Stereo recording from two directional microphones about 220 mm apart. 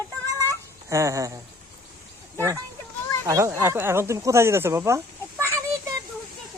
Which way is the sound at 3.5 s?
10° right (ahead or behind).